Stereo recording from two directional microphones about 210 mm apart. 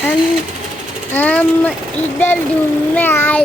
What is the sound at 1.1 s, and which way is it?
Speech, 5° left (ahead or behind).